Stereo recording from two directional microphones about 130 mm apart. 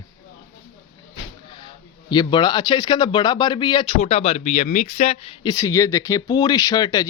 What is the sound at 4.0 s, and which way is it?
Speech, 55° left (ahead or behind).